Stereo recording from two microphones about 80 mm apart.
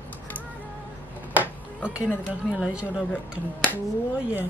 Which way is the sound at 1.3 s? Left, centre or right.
Centre.